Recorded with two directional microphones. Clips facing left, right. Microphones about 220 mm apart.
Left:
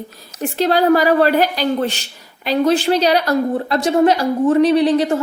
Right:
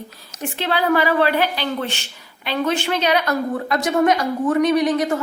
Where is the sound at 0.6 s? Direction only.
40° left (ahead or behind).